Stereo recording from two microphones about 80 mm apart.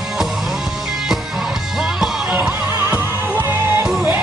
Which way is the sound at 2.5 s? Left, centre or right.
Right.